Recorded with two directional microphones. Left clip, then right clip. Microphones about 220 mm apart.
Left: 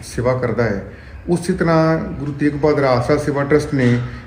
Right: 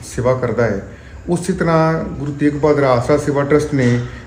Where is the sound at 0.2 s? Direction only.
15° right (ahead or behind).